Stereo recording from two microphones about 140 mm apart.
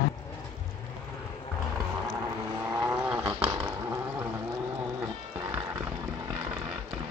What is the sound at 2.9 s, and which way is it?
Roaring cats, 5° right (ahead or behind).